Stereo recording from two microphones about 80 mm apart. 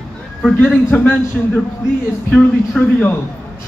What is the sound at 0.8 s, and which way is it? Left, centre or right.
Speech, centre.